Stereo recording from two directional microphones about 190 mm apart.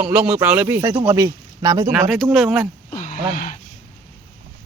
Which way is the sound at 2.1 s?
Centre (ahead or behind).